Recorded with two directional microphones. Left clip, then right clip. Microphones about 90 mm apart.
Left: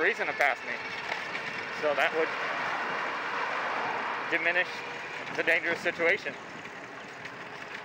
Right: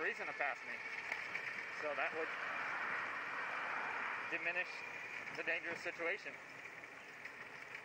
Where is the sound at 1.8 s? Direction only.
15° left (ahead or behind).